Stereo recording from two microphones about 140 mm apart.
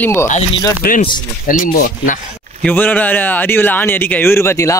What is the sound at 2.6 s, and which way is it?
A man's voice, 15° left (ahead or behind).